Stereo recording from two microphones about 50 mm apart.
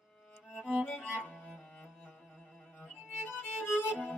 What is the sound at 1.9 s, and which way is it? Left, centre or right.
Music, left.